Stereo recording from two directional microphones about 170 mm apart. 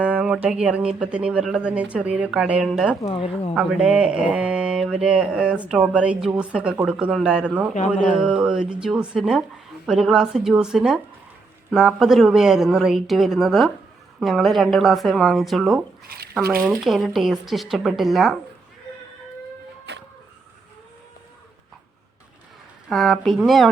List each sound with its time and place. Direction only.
0.0 s speech: 5° right (ahead or behind)
3.0 s speech: 30° left (ahead or behind)
3.5 s speech: centre (ahead or behind)
16.0 s drip: 65° right (ahead or behind)
16.6 s speech: centre (ahead or behind)
19.9 s vehicle: 90° right
22.9 s speech: centre (ahead or behind)